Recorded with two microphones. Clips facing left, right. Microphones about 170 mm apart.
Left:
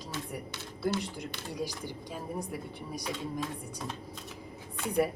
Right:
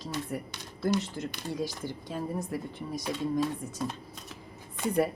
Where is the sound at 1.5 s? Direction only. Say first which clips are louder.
Even; 15° left (ahead or behind).